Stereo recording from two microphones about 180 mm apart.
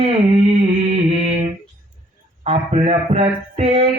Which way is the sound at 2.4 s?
35° right (ahead or behind).